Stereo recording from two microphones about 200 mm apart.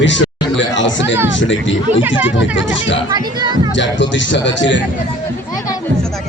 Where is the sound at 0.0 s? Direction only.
65° left (ahead or behind).